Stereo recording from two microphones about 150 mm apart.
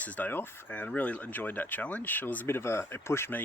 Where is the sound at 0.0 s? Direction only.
10° left (ahead or behind).